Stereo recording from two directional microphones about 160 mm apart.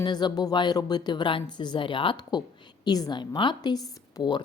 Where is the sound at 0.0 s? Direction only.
25° left (ahead or behind).